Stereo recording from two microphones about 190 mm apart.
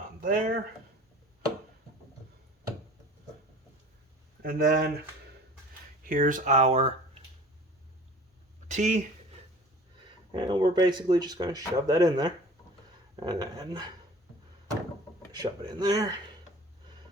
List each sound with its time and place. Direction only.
0.2 s speech: 45° right (ahead or behind)
4.4 s speech: 50° right (ahead or behind)
6.0 s speech: 45° right (ahead or behind)
8.6 s speech: 40° right (ahead or behind)
10.3 s speech: 25° right (ahead or behind)
15.3 s speech: 20° right (ahead or behind)